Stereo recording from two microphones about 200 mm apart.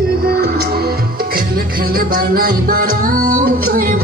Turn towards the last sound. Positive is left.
turn(degrees=-45)  # may be behind; listen again after turning